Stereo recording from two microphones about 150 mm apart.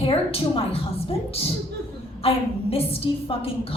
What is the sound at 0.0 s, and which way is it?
Speech, 35° left (ahead or behind).